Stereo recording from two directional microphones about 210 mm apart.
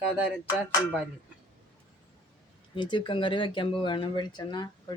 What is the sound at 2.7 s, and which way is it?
Speech, 20° left (ahead or behind).